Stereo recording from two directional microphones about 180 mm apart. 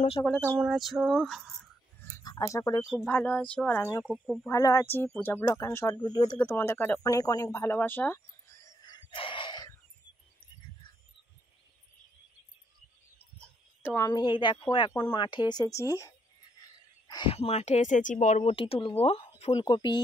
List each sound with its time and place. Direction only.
0.2 s music: centre (ahead or behind)
2.1 s speech: 20° left (ahead or behind)
2.8 s music: centre (ahead or behind)
3.1 s speech: 10° left (ahead or behind)
4.0 s music: centre (ahead or behind)
4.5 s speech: 20° left (ahead or behind)
6.3 s speech: 10° left (ahead or behind)
13.4 s speech: 15° left (ahead or behind)
17.1 s speech: 30° left (ahead or behind); by 18.4 s 45° left (ahead or behind)
18.4 s speech: 30° left (ahead or behind)